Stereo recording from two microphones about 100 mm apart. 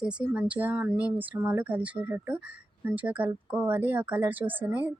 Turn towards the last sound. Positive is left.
turn(degrees=-15)  # may be behind; listen again after turning